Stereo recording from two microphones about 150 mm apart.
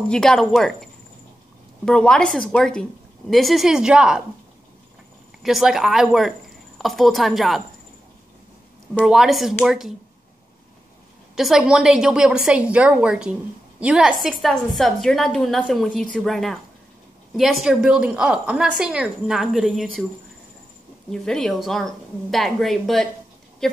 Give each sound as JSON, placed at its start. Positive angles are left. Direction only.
{"t": 0.1, "sound": "a woman's voice", "side_deg": 5}
{"t": 1.9, "sound": "a woman's voice", "side_deg": 5}
{"t": 5.4, "sound": "a woman's voice", "side_deg": 0}
{"t": 9.0, "sound": "a woman's voice", "side_deg": 0}
{"t": 11.3, "sound": "a woman's voice", "side_deg": -5}
{"t": 21.1, "sound": "a woman's voice", "side_deg": 5}